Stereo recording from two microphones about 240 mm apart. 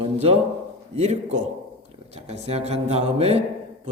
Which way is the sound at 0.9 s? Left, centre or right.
Right.